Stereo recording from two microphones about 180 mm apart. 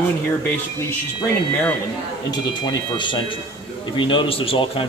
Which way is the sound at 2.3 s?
25° left (ahead or behind).